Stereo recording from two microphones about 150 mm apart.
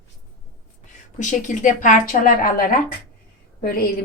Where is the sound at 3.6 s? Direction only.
75° left (ahead or behind).